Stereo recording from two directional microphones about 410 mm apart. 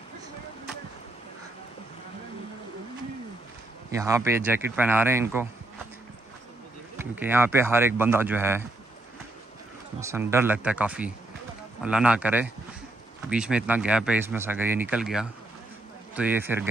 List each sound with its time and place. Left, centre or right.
3.9 s speech: centre
7.0 s speech: centre
9.9 s speech: centre